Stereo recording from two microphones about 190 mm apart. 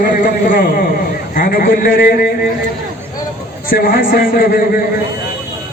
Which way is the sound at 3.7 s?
50° left (ahead or behind).